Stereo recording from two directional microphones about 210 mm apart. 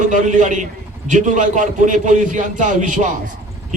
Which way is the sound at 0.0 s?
35° right (ahead or behind).